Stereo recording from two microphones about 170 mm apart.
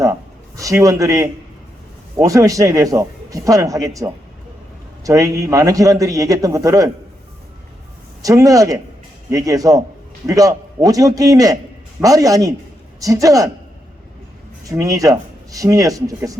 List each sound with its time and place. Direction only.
0.0 s a man's voice: 20° right (ahead or behind)
8.2 s a man's voice: 20° right (ahead or behind)
14.6 s a man's voice: 20° right (ahead or behind)